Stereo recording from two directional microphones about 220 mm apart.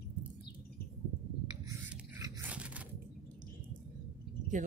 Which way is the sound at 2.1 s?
10° right (ahead or behind).